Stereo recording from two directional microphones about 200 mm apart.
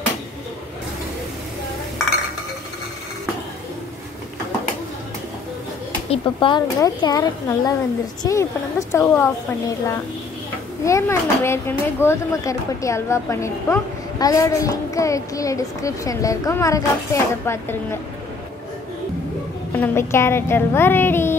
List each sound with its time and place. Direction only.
6.0 s a woman's voice: 30° left (ahead or behind)
19.7 s a woman's voice: 10° left (ahead or behind)